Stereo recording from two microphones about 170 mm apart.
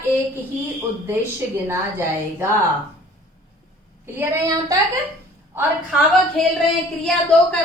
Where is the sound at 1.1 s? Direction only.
15° right (ahead or behind).